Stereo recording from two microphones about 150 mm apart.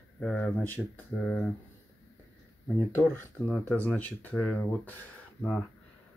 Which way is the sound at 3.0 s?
5° left (ahead or behind).